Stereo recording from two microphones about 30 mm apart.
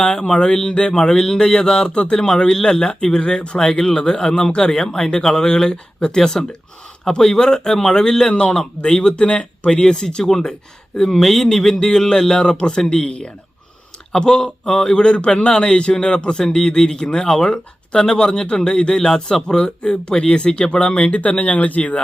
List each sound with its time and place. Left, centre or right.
0.0 s a man's voice: left
0.9 s a man's voice: left
10.2 s a man's voice: centre
11.2 s a man's voice: centre; by 13.3 s left
14.1 s a man's voice: left
14.9 s a man's voice: left
21.1 s speech: left
21.8 s speech: left